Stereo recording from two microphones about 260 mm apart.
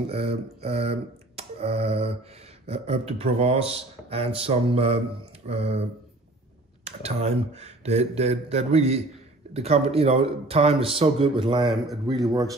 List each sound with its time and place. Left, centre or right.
0.1 s a man's voice: right
11.7 s speech: centre